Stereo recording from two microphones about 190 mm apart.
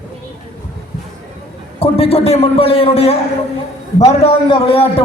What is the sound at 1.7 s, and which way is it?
A man's voice, 30° left (ahead or behind).